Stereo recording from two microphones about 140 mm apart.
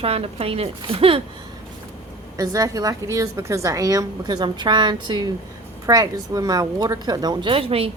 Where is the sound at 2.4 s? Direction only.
25° right (ahead or behind).